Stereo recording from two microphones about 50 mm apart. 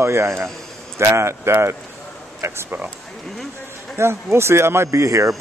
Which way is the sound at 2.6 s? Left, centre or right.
Right.